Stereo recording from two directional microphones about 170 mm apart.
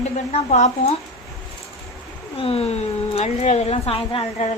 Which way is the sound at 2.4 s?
35° left (ahead or behind).